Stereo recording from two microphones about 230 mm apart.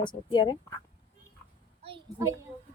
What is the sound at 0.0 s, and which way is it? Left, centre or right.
Speech, centre.